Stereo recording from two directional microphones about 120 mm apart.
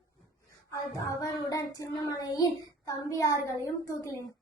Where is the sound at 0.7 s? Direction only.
30° left (ahead or behind).